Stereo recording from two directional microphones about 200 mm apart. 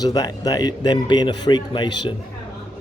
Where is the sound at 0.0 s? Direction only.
20° left (ahead or behind).